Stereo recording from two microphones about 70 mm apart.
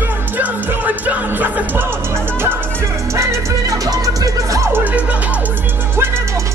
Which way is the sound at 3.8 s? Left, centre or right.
Right.